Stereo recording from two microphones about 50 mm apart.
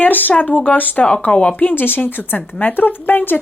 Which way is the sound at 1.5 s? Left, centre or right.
Left.